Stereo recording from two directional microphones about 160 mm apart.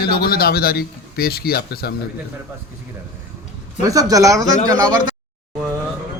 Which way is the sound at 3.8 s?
20° right (ahead or behind).